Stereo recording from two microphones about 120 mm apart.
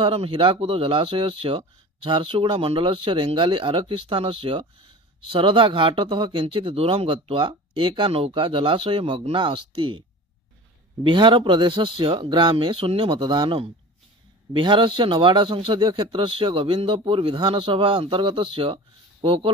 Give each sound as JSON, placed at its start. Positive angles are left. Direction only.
{"t": 0.0, "sound": "speech", "side_deg": -50}
{"t": 11.1, "sound": "speech", "side_deg": -40}